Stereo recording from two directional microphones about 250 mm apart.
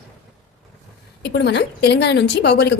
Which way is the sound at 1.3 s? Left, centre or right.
Left.